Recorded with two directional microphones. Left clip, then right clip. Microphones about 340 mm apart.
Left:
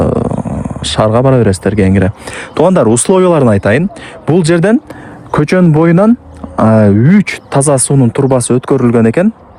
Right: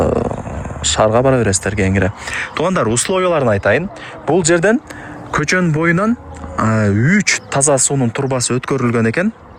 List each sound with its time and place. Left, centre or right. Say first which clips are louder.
0.0 s dog: left 3 dB; centre
0.5 s speech: left 2 dB; centre